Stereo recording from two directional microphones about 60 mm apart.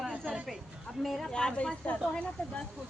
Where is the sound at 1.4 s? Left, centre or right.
Centre.